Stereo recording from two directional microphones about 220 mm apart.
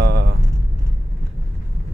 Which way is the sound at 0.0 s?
45° right (ahead or behind).